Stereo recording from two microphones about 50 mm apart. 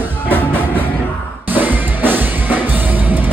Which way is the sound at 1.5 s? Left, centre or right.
Right.